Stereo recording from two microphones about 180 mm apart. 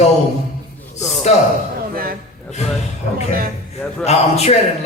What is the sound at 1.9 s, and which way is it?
Speech, 55° right (ahead or behind).